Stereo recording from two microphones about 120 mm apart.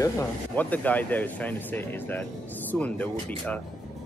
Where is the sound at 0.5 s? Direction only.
15° left (ahead or behind).